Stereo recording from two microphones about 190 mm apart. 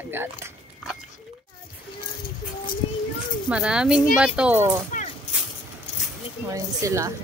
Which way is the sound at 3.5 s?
5° right (ahead or behind).